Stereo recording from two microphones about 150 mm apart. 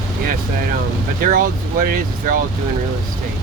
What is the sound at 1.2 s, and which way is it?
Speech, 70° right (ahead or behind).